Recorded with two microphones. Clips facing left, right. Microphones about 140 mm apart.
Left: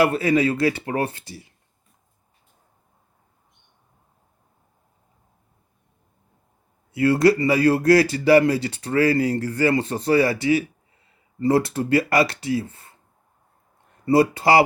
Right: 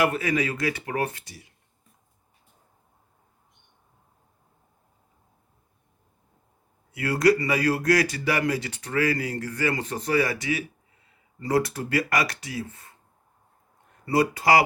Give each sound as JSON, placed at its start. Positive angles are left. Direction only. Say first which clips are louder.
{"t": 0.0, "sound": "speech", "louder": "left 6 dB", "side_deg": 30}
{"t": 6.9, "sound": "speech", "louder": "left 4 dB", "side_deg": 30}
{"t": 14.0, "sound": "speech", "louder": "left 5 dB", "side_deg": 30}